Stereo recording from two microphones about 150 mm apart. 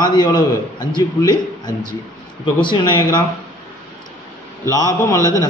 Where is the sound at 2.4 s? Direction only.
30° left (ahead or behind).